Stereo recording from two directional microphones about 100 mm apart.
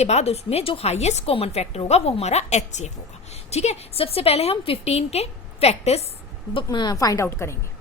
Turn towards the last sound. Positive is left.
turn(degrees=25)  # may be behind; listen again after turning